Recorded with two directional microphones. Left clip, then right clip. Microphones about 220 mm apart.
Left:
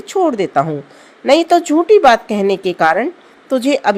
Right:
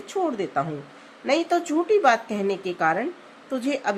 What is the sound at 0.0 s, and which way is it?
A woman's voice, 35° left (ahead or behind).